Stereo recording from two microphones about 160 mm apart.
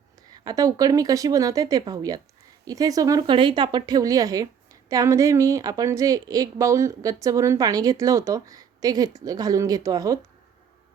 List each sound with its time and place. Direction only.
0.2 s a woman's voice: 25° right (ahead or behind)